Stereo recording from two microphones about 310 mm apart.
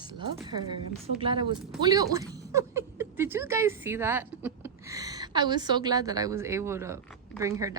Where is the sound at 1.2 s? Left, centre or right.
Centre.